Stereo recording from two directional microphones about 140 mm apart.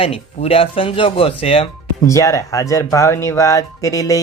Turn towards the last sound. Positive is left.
turn(degrees=25)  # may be behind; listen again after turning